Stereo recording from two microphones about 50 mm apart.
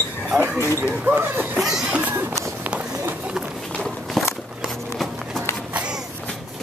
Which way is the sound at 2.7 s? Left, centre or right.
Centre.